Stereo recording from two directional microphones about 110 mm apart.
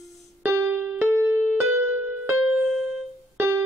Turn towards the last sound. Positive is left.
turn(degrees=-20)  # may be behind; listen again after turning